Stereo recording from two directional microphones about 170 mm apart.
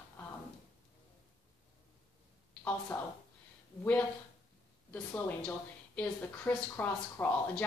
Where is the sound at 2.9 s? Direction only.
20° left (ahead or behind).